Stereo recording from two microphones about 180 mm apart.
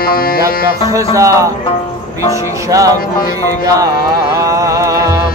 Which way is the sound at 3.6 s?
20° right (ahead or behind).